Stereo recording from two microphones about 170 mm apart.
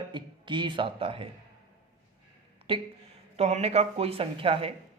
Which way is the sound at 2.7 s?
30° right (ahead or behind).